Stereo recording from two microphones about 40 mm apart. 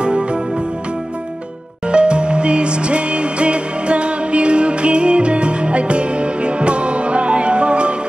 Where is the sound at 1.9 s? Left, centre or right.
Right.